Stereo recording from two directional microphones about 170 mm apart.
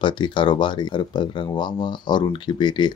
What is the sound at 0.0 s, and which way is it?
Speech, 30° left (ahead or behind).